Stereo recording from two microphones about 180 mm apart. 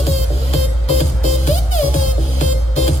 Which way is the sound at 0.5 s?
40° left (ahead or behind).